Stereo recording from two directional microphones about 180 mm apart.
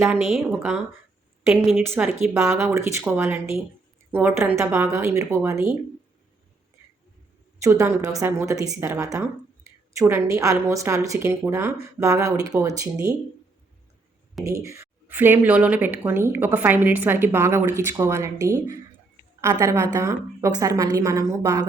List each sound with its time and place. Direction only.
0.0 s speech: 5° right (ahead or behind)
1.8 s speech: 10° right (ahead or behind)
7.6 s speech: 15° right (ahead or behind)
14.4 s speech: 15° right (ahead or behind)